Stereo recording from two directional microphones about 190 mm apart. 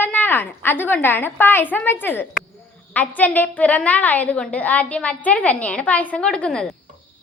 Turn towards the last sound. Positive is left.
turn(degrees=5)  # may be behind; listen again after turning